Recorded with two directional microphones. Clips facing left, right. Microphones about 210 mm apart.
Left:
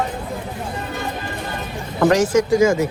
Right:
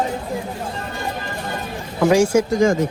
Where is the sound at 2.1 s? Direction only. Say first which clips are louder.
Right 2 dB; 10° right (ahead or behind).